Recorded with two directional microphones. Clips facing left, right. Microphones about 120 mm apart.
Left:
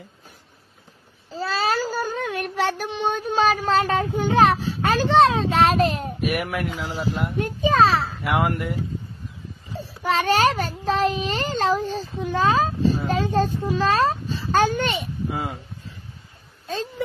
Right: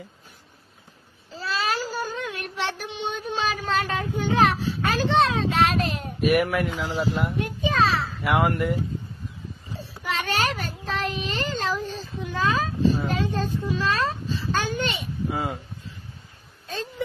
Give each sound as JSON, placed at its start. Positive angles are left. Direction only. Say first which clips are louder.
{"t": 1.3, "sound": "child singing", "louder": "left 4 dB", "side_deg": 35}
{"t": 4.6, "sound": "a child's voice", "louder": "left 3 dB", "side_deg": 35}
{"t": 6.2, "sound": "speech", "louder": "right 5 dB", "side_deg": 0}
{"t": 7.3, "sound": "a sound", "louder": "left 5 dB", "side_deg": 40}
{"t": 8.2, "sound": "speech", "louder": "right 1 dB", "side_deg": 5}
{"t": 9.8, "sound": "child singing", "louder": "left 7 dB", "side_deg": 35}
{"t": 10.9, "sound": "a child's voice", "louder": "left 7 dB", "side_deg": 30}
{"t": 15.3, "sound": "speech", "louder": "right 1 dB", "side_deg": 0}